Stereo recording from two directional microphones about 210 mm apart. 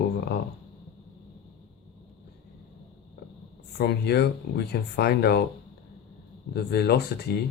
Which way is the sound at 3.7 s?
50° left (ahead or behind).